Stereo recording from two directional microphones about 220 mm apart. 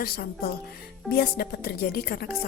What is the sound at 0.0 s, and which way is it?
Speech, 45° left (ahead or behind).